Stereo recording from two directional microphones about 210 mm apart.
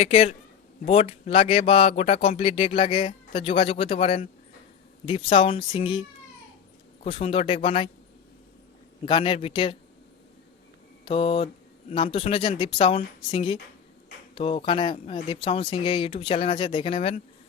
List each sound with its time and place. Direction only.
0.0 s speech: 30° left (ahead or behind)
9.0 s speech: 25° left (ahead or behind)
11.0 s mantra: 25° left (ahead or behind)
12.1 s speech: 25° left (ahead or behind)